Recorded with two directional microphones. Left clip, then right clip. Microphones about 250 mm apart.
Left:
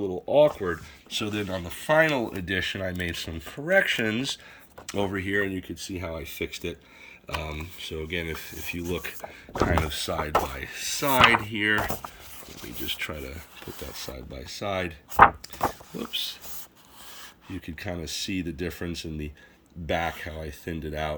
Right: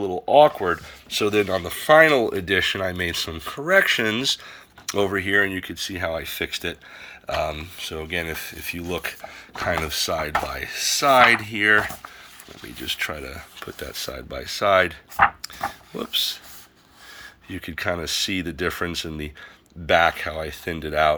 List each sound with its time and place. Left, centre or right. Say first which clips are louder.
0.4 s speech: right 5 dB; right
1.1 s speech: right 9 dB; centre
16.1 s speech: right 8 dB; centre
17.5 s speech: right 9 dB; centre